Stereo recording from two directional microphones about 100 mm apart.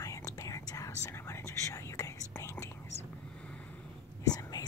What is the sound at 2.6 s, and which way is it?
Whispering, 25° left (ahead or behind).